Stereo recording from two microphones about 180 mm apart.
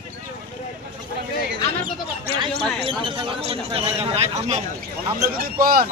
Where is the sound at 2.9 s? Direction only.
30° right (ahead or behind).